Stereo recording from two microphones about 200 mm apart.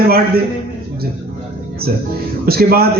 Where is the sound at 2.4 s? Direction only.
50° right (ahead or behind).